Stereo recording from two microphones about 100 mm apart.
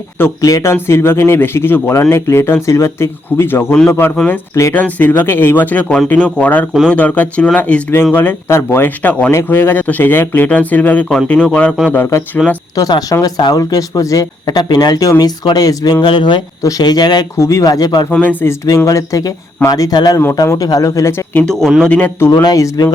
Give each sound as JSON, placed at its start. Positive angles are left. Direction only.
{"t": 0.4, "sound": "a man's voice", "side_deg": 30}
{"t": 4.7, "sound": "a man's voice", "side_deg": 15}
{"t": 12.4, "sound": "speech", "side_deg": -5}
{"t": 12.7, "sound": "speech", "side_deg": 35}
{"t": 17.3, "sound": "speech", "side_deg": 30}
{"t": 18.1, "sound": "speech", "side_deg": 15}
{"t": 18.9, "sound": "speech", "side_deg": 35}
{"t": 21.3, "sound": "speech", "side_deg": 5}
{"t": 22.3, "sound": "speech", "side_deg": 40}